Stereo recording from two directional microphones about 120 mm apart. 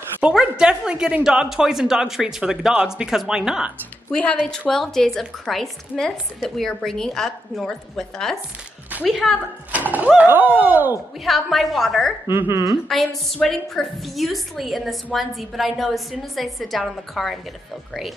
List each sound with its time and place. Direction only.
0.2 s a woman's voice: 5° right (ahead or behind)
4.1 s a woman's voice: 5° left (ahead or behind)
9.7 s speech: 15° right (ahead or behind)
11.2 s a woman's voice: centre (ahead or behind)
12.3 s speech: 20° right (ahead or behind)
13.3 s a woman's voice: centre (ahead or behind)